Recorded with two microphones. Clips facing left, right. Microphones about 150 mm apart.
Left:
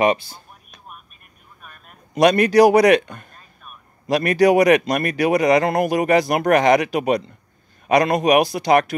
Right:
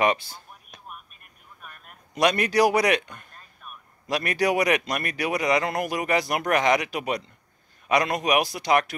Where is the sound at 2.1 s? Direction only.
45° left (ahead or behind).